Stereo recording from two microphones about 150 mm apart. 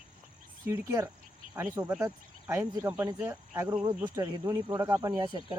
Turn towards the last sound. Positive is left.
turn(degrees=-30)  # may be behind; listen again after turning